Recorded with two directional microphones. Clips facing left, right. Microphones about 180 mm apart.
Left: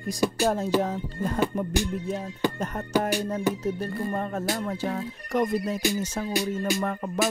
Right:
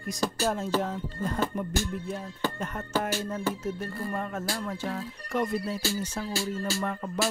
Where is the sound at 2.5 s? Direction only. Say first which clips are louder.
Left 4 dB; 40° left (ahead or behind).